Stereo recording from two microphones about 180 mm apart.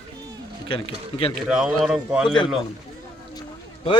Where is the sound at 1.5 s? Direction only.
5° right (ahead or behind).